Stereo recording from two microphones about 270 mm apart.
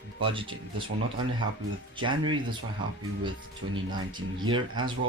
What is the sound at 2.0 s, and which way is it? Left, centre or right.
Speech, centre.